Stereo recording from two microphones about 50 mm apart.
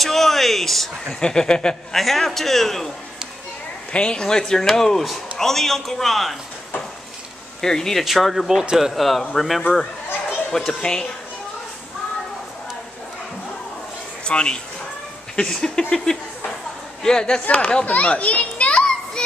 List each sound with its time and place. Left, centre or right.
0.0 s a man's voice: centre
1.2 s a man's voice: centre
2.0 s a man's voice: centre
3.9 s a man's voice: centre
7.6 s a man's voice: centre
8.0 s a man's voice: centre
10.7 s a man's voice: centre
14.2 s a man's voice: centre
17.8 s children playing: left